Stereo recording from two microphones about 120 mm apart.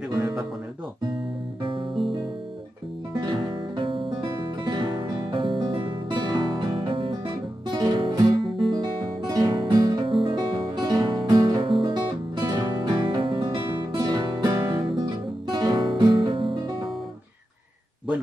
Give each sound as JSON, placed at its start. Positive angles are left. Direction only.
{"t": 0.2, "sound": "music", "side_deg": -5}
{"t": 1.6, "sound": "music", "side_deg": -45}
{"t": 3.2, "sound": "music", "side_deg": -40}
{"t": 10.0, "sound": "music", "side_deg": -45}